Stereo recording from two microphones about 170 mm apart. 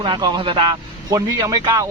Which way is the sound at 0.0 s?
25° right (ahead or behind).